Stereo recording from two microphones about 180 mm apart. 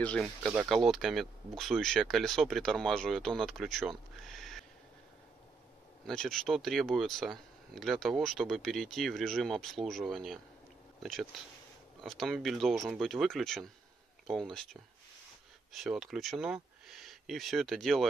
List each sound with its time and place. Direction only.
0.0 s speech: 5° left (ahead or behind)
4.3 s a sound: centre (ahead or behind)
6.0 s speech: 5° left (ahead or behind)